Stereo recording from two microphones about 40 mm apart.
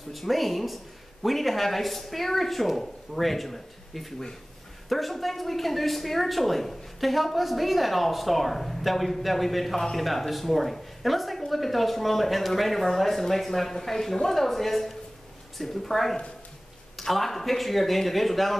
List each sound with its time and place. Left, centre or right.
0.1 s speech: centre